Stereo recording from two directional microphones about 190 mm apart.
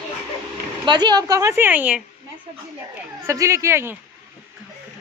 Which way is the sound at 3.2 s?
15° right (ahead or behind).